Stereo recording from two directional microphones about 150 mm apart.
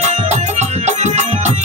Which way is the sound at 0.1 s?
50° right (ahead or behind).